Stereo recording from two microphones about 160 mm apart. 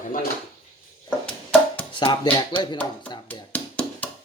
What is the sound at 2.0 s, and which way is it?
Speech, 35° left (ahead or behind).